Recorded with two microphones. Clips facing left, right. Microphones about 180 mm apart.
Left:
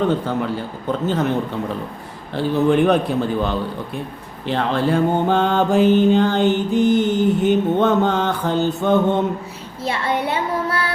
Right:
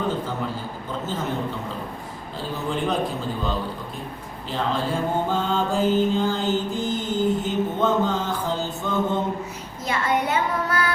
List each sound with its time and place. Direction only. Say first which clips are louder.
0.3 s a man's voice: left 6 dB; 65° left (ahead or behind)
2.3 s mantra: left 12 dB; 65° left (ahead or behind)
9.8 s child singing: left 2 dB; 30° left (ahead or behind)